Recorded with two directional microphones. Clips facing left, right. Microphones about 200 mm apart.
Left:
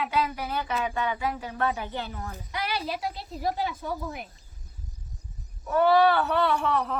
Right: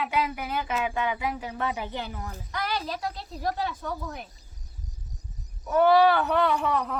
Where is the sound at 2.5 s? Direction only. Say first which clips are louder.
Even; 10° left (ahead or behind).